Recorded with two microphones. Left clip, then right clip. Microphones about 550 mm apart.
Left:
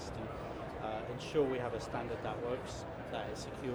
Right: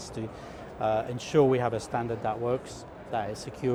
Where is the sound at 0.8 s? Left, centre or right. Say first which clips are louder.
Right 15 dB; right.